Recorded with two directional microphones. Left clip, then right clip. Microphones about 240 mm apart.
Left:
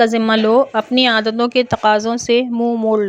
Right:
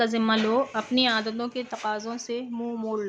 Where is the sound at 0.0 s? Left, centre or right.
Left.